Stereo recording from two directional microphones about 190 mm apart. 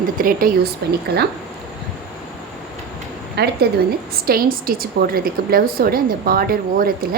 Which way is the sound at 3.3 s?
60° right (ahead or behind).